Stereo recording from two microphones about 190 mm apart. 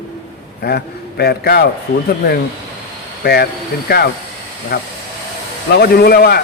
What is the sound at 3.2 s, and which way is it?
A man's voice, 55° left (ahead or behind).